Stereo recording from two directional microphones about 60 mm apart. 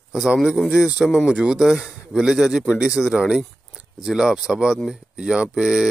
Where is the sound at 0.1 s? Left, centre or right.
Centre.